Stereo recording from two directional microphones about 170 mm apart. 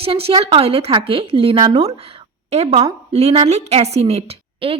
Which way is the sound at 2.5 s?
40° right (ahead or behind).